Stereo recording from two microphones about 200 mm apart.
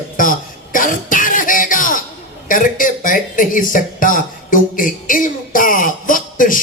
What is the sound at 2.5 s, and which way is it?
Speech, 40° left (ahead or behind).